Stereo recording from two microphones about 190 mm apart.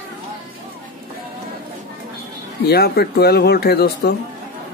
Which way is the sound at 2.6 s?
55° left (ahead or behind).